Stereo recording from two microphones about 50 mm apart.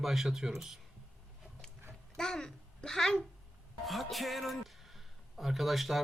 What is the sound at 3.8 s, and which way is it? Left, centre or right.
Speech, centre.